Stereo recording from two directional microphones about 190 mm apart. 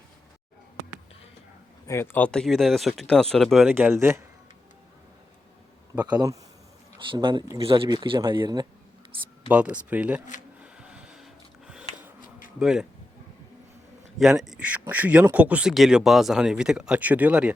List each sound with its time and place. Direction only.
1.9 s speech: 10° left (ahead or behind)
5.9 s speech: 20° right (ahead or behind)
9.5 s speech: 5° right (ahead or behind)
10.6 s printer: 5° right (ahead or behind)
12.5 s speech: 5° right (ahead or behind)
14.2 s speech: centre (ahead or behind)